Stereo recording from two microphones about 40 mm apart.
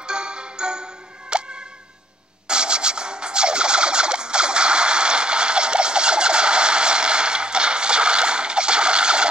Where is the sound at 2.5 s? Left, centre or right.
Right.